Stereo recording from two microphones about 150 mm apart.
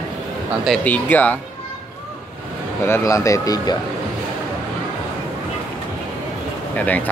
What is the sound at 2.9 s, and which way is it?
Speech, 20° left (ahead or behind).